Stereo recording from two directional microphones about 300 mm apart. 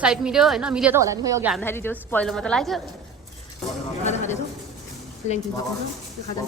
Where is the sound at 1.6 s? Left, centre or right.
Centre.